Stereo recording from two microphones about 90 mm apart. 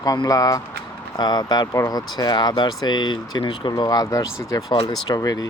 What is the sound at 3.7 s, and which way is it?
Speech, 50° left (ahead or behind).